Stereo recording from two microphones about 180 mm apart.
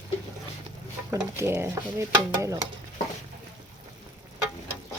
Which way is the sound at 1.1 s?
15° right (ahead or behind).